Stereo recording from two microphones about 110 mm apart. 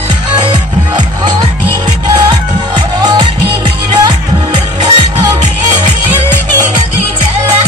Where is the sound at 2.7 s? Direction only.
40° right (ahead or behind).